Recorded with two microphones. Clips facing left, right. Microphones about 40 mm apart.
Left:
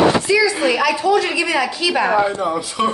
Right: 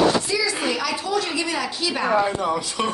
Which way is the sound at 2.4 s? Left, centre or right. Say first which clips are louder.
Left 4 dB; centre.